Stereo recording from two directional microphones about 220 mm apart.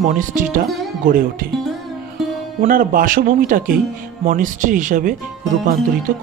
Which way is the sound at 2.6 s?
40° right (ahead or behind).